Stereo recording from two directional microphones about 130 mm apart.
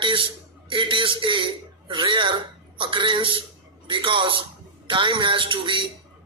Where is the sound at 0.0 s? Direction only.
40° right (ahead or behind).